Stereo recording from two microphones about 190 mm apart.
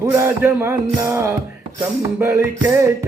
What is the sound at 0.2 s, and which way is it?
Music, 15° right (ahead or behind).